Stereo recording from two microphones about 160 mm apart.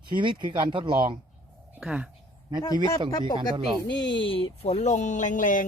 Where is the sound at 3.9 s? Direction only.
90° left.